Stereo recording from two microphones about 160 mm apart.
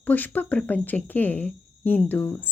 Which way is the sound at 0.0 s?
10° left (ahead or behind).